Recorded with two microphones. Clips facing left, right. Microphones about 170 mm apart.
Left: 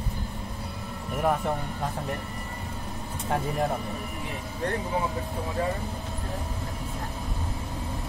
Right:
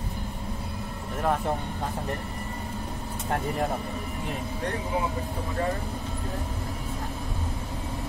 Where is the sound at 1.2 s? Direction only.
5° left (ahead or behind).